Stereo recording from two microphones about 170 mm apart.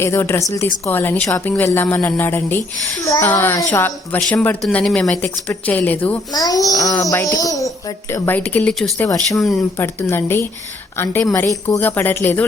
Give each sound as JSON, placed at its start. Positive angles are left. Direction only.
{"t": 0.0, "sound": "a woman's voice", "side_deg": 15}
{"t": 6.3, "sound": "a child's voice", "side_deg": 20}
{"t": 9.7, "sound": "a woman's voice", "side_deg": 15}